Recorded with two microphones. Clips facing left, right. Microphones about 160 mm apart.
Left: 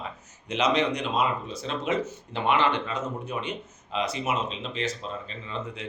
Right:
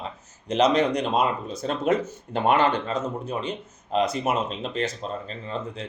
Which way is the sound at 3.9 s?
50° right (ahead or behind).